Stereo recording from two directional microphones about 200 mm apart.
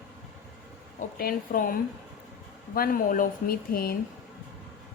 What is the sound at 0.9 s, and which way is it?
Speech, 45° left (ahead or behind).